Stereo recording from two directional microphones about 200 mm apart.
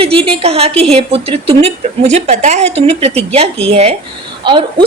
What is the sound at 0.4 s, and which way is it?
A woman's voice, 30° right (ahead or behind).